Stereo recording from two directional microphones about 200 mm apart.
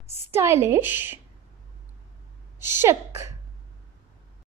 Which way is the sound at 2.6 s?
10° right (ahead or behind).